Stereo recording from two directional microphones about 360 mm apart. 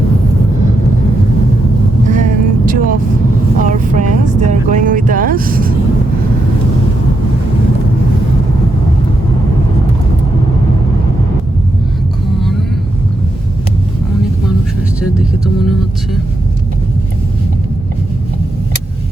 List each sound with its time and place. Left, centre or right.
2.0 s vehicle: right